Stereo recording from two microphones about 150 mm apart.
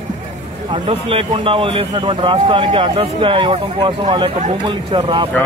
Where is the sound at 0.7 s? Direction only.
35° right (ahead or behind).